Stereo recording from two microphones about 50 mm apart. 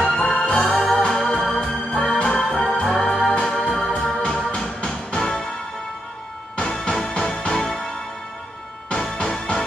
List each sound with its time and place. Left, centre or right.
0.0 s music: centre
2.3 s music: centre
2.6 s music: centre
3.5 s organ: centre
4.5 s music: centre
6.7 s music: centre
8.8 s music: left
9.1 s music: centre